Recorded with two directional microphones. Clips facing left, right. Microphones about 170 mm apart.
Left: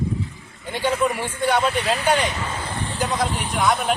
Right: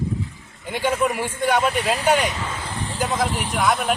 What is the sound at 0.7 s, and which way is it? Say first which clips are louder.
Speech: even; 10° right (ahead or behind).